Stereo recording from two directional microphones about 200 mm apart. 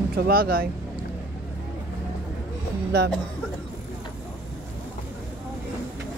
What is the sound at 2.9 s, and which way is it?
Speech, 55° right (ahead or behind).